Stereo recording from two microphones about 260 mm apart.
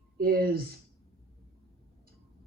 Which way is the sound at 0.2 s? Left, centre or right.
Right.